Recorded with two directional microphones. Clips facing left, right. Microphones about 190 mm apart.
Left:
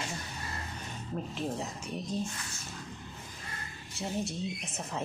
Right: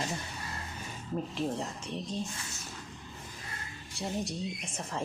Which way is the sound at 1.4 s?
5° left (ahead or behind).